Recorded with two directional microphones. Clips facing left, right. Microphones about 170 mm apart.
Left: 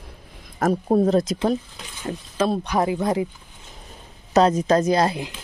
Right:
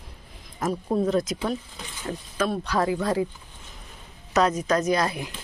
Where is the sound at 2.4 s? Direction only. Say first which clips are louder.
Left 3 dB; 25° left (ahead or behind).